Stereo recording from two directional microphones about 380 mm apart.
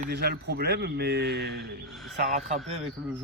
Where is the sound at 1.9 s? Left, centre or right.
Centre.